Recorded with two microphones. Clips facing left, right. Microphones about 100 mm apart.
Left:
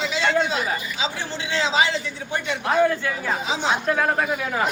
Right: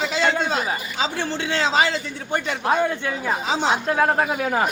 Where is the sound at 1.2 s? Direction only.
50° right (ahead or behind).